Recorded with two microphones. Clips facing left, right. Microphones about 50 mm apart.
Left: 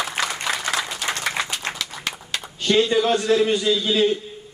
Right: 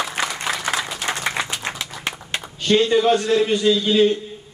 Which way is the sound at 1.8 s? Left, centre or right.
Right.